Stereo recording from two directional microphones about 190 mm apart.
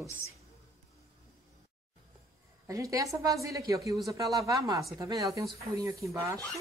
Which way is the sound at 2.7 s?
20° right (ahead or behind).